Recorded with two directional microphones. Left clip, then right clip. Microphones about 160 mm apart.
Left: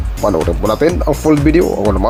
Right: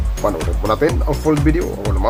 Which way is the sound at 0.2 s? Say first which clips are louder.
Left 5 dB; 40° left (ahead or behind).